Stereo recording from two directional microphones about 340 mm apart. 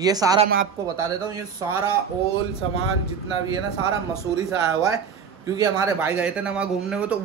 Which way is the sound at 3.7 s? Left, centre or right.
Centre.